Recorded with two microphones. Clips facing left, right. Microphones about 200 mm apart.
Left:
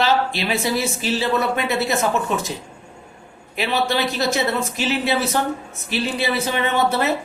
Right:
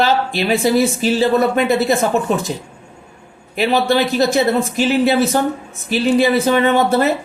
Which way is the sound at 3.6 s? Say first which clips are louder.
Right 6 dB; 50° right (ahead or behind).